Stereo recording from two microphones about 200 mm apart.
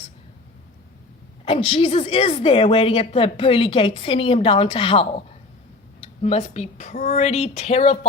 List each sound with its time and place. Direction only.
1.5 s a woman's voice: 30° left (ahead or behind)